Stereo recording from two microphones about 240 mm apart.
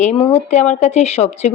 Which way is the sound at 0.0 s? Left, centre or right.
Left.